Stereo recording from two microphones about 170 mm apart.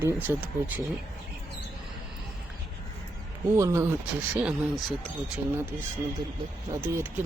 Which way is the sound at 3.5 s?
15° right (ahead or behind).